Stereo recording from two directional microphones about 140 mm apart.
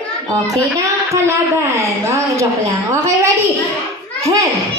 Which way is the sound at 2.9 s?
20° right (ahead or behind).